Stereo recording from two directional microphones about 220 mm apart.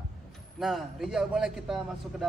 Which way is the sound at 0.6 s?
Centre (ahead or behind).